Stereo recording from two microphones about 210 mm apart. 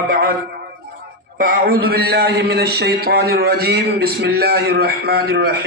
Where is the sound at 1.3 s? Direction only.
45° right (ahead or behind).